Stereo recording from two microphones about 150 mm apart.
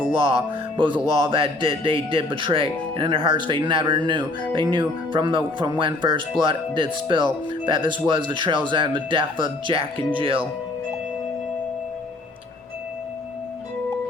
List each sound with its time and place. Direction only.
0.8 s a man's voice: 35° right (ahead or behind)